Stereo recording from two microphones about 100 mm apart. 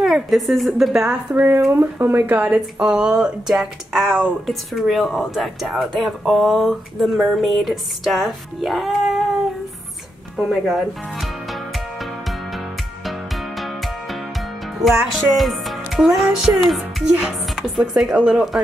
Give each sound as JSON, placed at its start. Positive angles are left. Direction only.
{"t": 0.0, "sound": "speech", "side_deg": 0}
{"t": 1.3, "sound": "speech", "side_deg": -20}
{"t": 14.8, "sound": "music", "side_deg": 0}
{"t": 16.6, "sound": "speech", "side_deg": 0}